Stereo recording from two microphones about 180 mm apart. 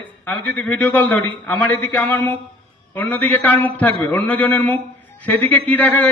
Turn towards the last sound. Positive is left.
turn(degrees=10)  # may be behind; listen again after turning